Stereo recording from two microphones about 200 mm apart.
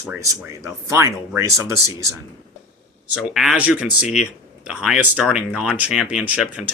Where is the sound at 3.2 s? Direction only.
Centre (ahead or behind).